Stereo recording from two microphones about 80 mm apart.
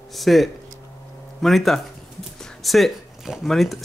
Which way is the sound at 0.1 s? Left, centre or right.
Centre.